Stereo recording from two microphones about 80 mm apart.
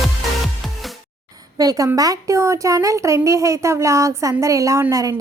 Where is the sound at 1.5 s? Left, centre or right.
Right.